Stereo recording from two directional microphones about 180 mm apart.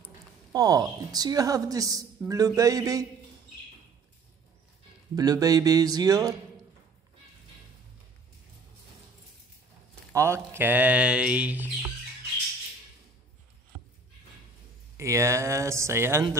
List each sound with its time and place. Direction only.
0.5 s a woman's voice: 20° right (ahead or behind)
5.1 s a woman's voice: 20° right (ahead or behind)
10.1 s speech: 15° right (ahead or behind)
15.0 s speech: 15° right (ahead or behind)